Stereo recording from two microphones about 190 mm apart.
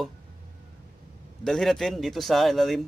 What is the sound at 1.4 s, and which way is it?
Speech, centre (ahead or behind).